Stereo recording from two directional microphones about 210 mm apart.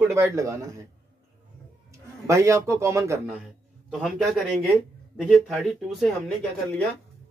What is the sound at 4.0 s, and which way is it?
Speech, centre (ahead or behind).